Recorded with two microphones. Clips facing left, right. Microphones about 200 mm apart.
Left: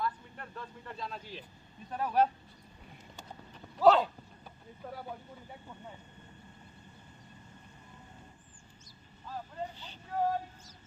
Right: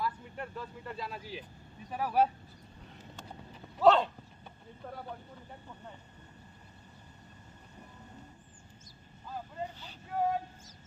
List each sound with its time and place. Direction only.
0.0 s vehicle: 10° right (ahead or behind)
1.9 s speech: 5° right (ahead or behind)
3.8 s speech: centre (ahead or behind)
9.3 s speech: 5° right (ahead or behind)